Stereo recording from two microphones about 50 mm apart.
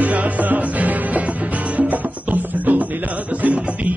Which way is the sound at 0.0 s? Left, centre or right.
Right.